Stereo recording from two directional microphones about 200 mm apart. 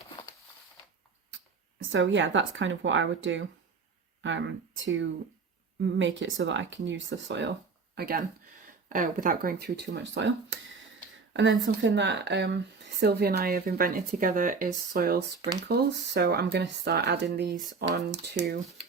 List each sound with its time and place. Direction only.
1.9 s speech: 65° right (ahead or behind)
7.9 s speech: 50° right (ahead or behind)
11.6 s speech: 65° right (ahead or behind)